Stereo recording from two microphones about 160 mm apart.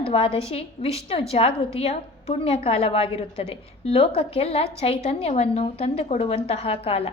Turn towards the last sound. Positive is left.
turn(degrees=35)  # may be behind; listen again after turning